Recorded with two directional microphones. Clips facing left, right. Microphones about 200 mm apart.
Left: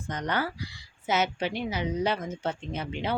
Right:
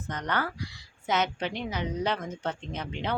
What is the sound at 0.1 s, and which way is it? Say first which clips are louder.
Speech: left 1 dB; 10° left (ahead or behind).